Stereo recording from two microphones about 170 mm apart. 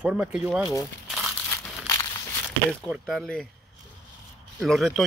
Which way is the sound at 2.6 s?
Centre (ahead or behind).